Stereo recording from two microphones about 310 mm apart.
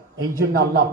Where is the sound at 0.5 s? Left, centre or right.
Right.